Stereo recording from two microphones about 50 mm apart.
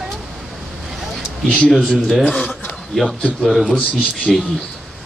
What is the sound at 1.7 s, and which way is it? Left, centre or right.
Speech, centre.